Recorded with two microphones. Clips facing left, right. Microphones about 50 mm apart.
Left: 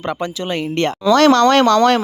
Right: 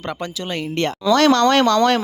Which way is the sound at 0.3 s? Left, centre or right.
Left.